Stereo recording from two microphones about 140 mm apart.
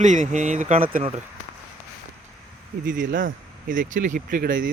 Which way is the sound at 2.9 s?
70° right (ahead or behind).